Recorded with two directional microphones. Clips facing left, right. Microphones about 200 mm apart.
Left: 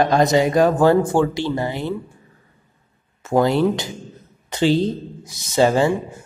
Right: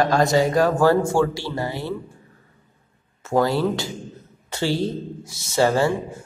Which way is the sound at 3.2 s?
15° left (ahead or behind).